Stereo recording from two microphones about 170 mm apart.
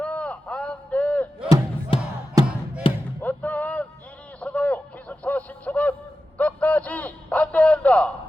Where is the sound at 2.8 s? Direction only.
30° left (ahead or behind).